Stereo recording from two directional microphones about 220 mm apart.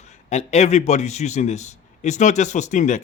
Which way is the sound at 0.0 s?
30° left (ahead or behind).